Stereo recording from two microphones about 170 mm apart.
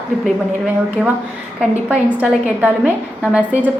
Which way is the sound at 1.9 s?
10° right (ahead or behind).